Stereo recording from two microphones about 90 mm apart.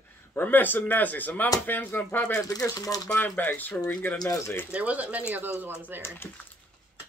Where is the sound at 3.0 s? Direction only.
15° left (ahead or behind).